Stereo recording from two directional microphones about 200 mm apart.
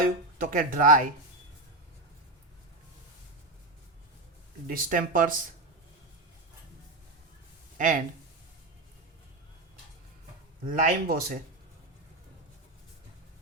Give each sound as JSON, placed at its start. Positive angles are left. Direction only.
{"t": 0.0, "sound": "speech", "side_deg": -45}
{"t": 4.6, "sound": "speech", "side_deg": -45}
{"t": 7.8, "sound": "speech", "side_deg": -40}
{"t": 10.7, "sound": "speech", "side_deg": -45}